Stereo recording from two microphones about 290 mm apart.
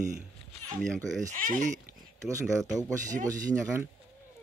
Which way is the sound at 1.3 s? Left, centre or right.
Right.